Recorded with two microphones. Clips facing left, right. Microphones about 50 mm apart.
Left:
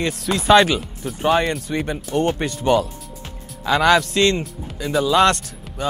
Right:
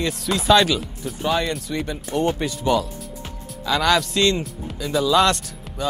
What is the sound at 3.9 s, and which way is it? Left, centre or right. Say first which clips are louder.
Speech: left 2 dB; centre.